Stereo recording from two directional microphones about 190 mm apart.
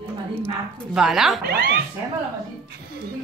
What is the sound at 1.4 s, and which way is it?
Speech, 55° right (ahead or behind).